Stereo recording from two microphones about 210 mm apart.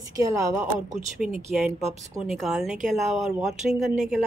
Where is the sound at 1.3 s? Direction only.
5° right (ahead or behind).